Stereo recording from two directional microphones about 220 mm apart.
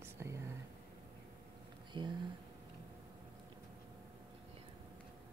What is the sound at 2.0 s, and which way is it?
Speech, 20° right (ahead or behind).